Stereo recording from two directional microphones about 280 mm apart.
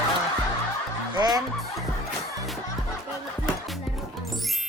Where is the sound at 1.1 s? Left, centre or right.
Centre.